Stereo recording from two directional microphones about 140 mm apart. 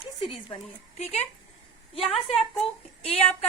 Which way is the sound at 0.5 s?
40° left (ahead or behind).